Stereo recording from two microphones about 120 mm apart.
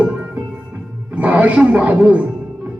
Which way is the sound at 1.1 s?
10° right (ahead or behind).